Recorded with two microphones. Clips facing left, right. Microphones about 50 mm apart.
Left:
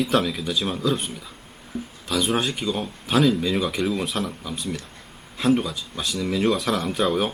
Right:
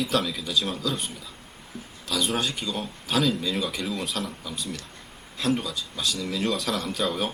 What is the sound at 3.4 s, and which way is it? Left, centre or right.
Speech, centre.